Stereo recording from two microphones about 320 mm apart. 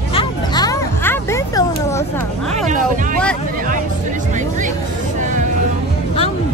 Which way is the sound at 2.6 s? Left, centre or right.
Right.